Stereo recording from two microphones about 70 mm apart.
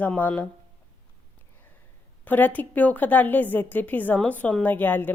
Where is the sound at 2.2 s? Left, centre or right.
Left.